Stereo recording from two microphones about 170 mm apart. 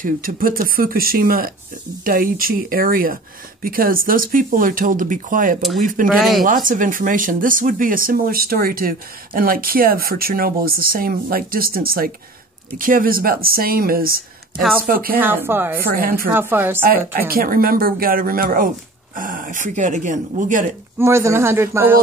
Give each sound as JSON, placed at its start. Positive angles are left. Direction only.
{"t": 0.0, "sound": "speech", "side_deg": -55}
{"t": 6.0, "sound": "speech", "side_deg": 0}
{"t": 6.4, "sound": "speech", "side_deg": -55}
{"t": 15.1, "sound": "a man's voice", "side_deg": -10}
{"t": 15.9, "sound": "speech", "side_deg": -60}
{"t": 16.3, "sound": "a man's voice", "side_deg": -10}
{"t": 16.8, "sound": "speech", "side_deg": -60}
{"t": 21.0, "sound": "a man's voice", "side_deg": -15}